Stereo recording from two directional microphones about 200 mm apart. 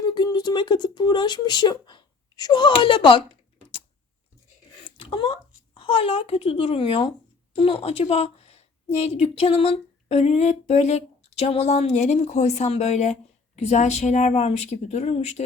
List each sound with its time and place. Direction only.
0.0 s speech: 20° left (ahead or behind)
4.9 s a woman's voice: 25° left (ahead or behind)